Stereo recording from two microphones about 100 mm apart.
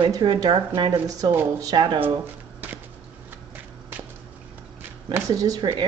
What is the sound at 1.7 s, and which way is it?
Speech, 55° right (ahead or behind).